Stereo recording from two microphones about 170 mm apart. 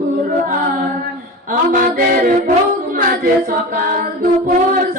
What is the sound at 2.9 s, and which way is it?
Singing, 55° right (ahead or behind).